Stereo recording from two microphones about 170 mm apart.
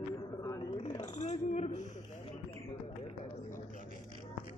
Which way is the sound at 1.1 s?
40° left (ahead or behind).